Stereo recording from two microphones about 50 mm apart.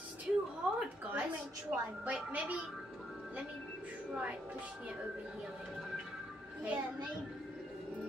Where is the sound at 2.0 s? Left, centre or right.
Right.